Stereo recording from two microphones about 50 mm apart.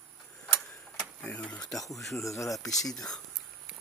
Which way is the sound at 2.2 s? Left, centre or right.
Left.